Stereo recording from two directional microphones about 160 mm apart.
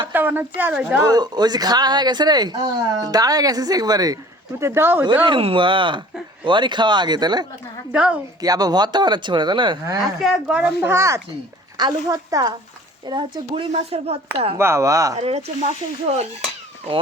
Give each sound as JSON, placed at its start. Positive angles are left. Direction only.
{"t": 0.1, "sound": "speech", "side_deg": -10}
{"t": 1.0, "sound": "speech", "side_deg": -25}
{"t": 5.2, "sound": "speech", "side_deg": -35}
{"t": 7.9, "sound": "speech", "side_deg": -10}
{"t": 8.4, "sound": "speech", "side_deg": -25}
{"t": 10.0, "sound": "speech", "side_deg": 0}
{"t": 13.7, "sound": "speech", "side_deg": -40}
{"t": 14.6, "sound": "speech", "side_deg": -20}
{"t": 15.2, "sound": "speech", "side_deg": -40}